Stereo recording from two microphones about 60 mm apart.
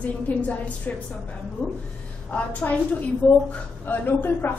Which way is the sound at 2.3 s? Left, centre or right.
Left.